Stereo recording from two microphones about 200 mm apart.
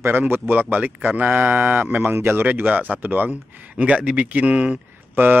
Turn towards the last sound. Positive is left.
turn(degrees=-10)  # may be behind; listen again after turning